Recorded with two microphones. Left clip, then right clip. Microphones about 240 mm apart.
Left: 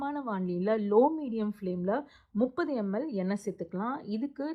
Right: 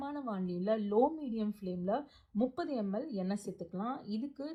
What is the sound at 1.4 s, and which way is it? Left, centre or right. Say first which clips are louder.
Speech: left 6 dB; left.